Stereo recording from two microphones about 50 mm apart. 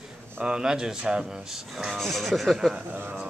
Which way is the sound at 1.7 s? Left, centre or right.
Centre.